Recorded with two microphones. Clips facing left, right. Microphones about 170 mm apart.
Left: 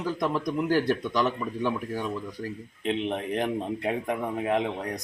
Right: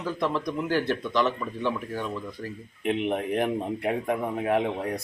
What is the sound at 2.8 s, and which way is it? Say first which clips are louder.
A man's voice: right 2 dB; 15° right (ahead or behind).